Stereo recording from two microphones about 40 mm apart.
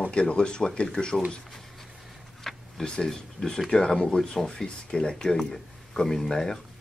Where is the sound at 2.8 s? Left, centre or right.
Left.